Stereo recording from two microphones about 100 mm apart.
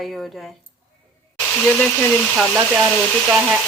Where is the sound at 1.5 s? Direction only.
15° left (ahead or behind).